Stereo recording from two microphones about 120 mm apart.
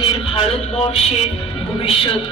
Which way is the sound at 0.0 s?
55° left (ahead or behind).